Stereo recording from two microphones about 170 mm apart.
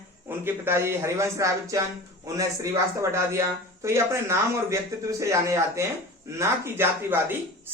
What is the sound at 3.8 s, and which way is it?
A man's voice, 15° right (ahead or behind).